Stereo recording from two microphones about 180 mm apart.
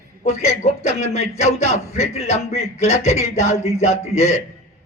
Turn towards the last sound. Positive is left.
turn(degrees=40)  # may be behind; listen again after turning